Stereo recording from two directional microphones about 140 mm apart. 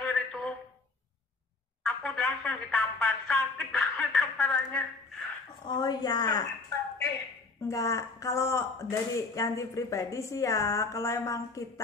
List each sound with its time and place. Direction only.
0.0 s a sound: 5° left (ahead or behind)
1.8 s speech: 5° left (ahead or behind)
5.7 s speech: 30° left (ahead or behind)
7.6 s speech: 25° left (ahead or behind)